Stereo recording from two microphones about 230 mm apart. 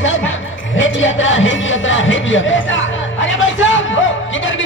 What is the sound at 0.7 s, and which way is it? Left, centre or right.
Music, left.